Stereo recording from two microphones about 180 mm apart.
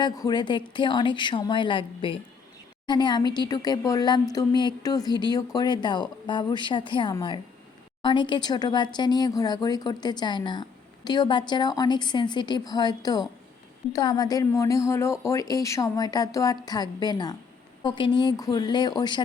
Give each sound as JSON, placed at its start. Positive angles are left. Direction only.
{"t": 0.0, "sound": "speech", "side_deg": 25}